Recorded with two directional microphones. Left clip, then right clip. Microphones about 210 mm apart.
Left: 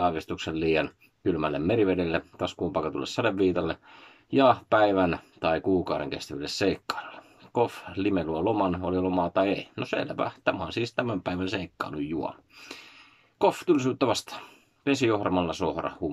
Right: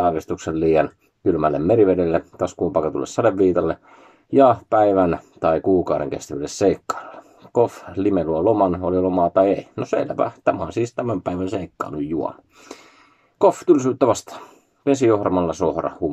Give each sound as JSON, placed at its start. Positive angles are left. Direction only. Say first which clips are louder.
{"t": 0.0, "sound": "speech", "louder": "right 7 dB", "side_deg": 10}